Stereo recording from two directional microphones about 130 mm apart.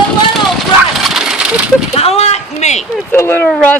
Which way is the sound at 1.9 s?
55° left (ahead or behind).